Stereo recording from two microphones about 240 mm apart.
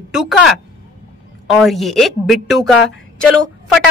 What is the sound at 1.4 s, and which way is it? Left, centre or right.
A woman's voice, centre.